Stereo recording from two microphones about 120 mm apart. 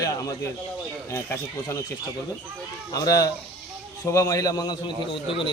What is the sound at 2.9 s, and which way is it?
A man's voice, 30° left (ahead or behind).